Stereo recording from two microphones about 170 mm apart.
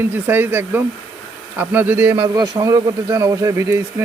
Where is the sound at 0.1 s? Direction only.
10° right (ahead or behind).